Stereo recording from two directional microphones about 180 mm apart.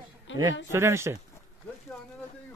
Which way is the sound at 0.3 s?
90° left.